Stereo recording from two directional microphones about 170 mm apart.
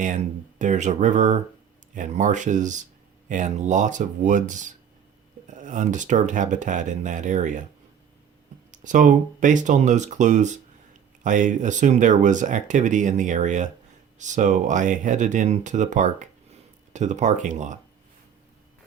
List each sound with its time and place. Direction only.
0.0 s speech: 45° right (ahead or behind)
8.7 s speech: 50° right (ahead or behind)